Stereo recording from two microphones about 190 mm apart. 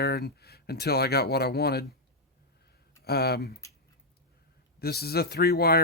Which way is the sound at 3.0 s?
55° left (ahead or behind).